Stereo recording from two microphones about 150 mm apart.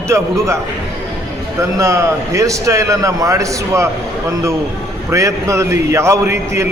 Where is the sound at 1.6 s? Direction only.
20° right (ahead or behind).